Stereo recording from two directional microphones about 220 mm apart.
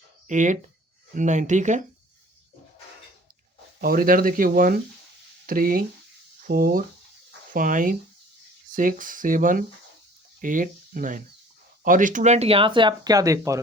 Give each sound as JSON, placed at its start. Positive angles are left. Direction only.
{"t": 0.3, "sound": "speech", "side_deg": -35}
{"t": 3.8, "sound": "speech", "side_deg": -40}